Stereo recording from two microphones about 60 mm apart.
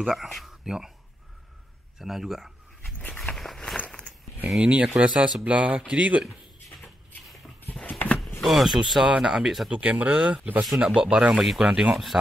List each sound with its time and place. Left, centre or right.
0.0 s speech: centre
2.0 s a sound: centre
3.1 s walk: centre
3.7 s a sound: left
4.6 s speech: centre
7.8 s a sound: left
8.4 s speech: centre
9.7 s speech: right
10.7 s speech: centre